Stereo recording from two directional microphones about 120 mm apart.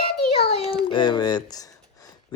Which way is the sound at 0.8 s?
40° left (ahead or behind).